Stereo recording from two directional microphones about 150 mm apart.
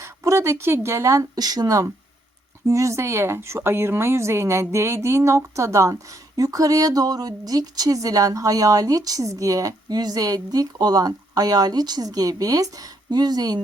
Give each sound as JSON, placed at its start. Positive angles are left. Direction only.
{"t": 0.0, "sound": "speech", "side_deg": -20}